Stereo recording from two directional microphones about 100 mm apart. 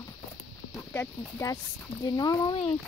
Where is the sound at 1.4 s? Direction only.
25° left (ahead or behind).